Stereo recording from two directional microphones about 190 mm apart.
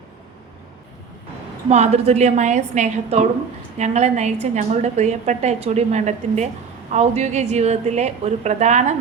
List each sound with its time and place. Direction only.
1.7 s a woman's voice: 35° right (ahead or behind)